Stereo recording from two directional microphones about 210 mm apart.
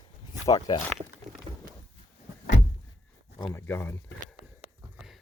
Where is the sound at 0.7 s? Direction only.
20° left (ahead or behind).